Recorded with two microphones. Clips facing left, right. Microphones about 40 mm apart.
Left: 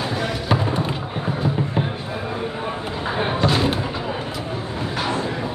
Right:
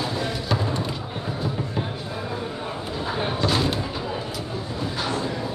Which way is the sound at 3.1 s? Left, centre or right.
Left.